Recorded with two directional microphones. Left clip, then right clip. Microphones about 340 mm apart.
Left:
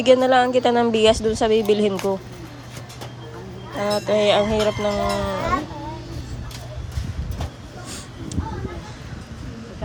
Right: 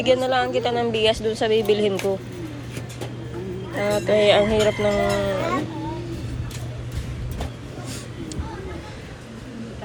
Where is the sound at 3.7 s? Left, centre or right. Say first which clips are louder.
Even; centre.